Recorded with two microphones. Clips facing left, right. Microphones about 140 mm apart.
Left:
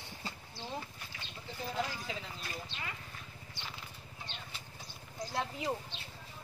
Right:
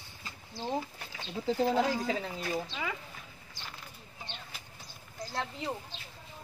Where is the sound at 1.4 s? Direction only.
90° right.